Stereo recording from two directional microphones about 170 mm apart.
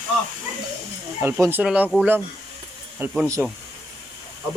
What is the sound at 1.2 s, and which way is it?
Speech, 10° right (ahead or behind).